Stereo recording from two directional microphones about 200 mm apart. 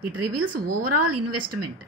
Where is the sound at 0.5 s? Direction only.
45° right (ahead or behind).